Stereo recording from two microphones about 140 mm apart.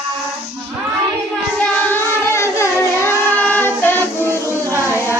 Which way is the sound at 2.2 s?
20° left (ahead or behind).